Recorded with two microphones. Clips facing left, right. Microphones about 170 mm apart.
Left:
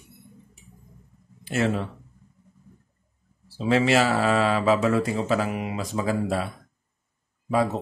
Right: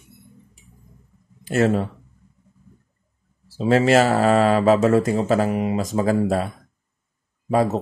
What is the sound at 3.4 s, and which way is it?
Speech, 45° right (ahead or behind).